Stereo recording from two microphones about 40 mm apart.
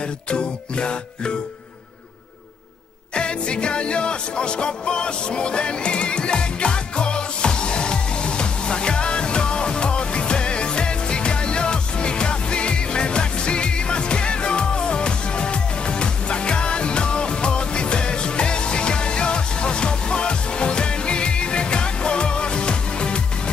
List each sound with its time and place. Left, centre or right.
0.3 s music: left
3.2 s music: left